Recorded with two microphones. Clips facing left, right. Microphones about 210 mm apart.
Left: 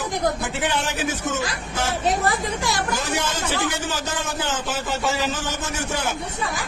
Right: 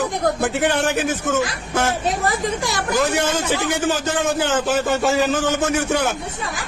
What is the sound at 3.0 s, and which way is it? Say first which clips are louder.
Speech: right 6 dB; 55° right (ahead or behind).